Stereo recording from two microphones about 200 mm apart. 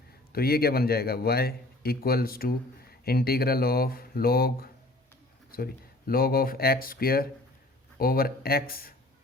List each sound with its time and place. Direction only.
0.3 s speech: 50° left (ahead or behind)